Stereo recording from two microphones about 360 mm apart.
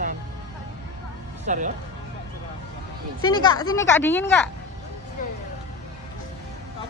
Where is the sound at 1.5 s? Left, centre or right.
Right.